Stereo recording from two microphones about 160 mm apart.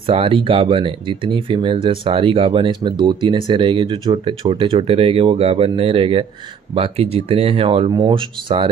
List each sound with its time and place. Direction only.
0.0 s speech: 35° right (ahead or behind)